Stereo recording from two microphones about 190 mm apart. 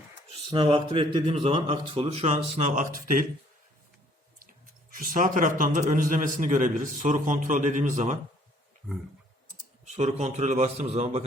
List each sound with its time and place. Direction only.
0.4 s a man's voice: 30° right (ahead or behind); by 3.2 s 45° right (ahead or behind)
4.4 s speech: 45° right (ahead or behind)
9.8 s a man's voice: 35° right (ahead or behind)